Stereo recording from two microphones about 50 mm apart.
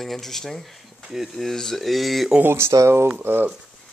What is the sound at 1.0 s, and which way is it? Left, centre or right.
Speech, centre.